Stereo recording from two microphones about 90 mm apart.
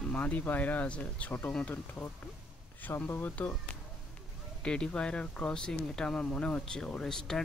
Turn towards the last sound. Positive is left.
turn(degrees=5)  # may be behind; listen again after turning